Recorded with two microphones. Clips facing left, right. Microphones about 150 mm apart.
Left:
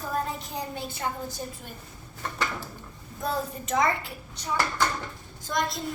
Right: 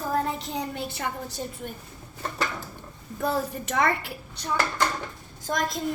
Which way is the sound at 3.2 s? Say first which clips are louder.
Right 3 dB; 70° right (ahead or behind).